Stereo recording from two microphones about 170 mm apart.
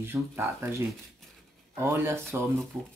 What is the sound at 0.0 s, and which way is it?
Speech, 15° right (ahead or behind).